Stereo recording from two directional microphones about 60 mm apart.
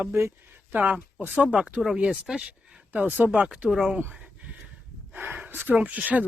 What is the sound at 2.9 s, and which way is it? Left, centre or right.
Speech, right.